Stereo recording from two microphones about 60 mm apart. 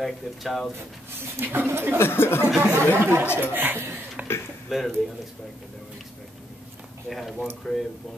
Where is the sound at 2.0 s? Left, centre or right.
Left.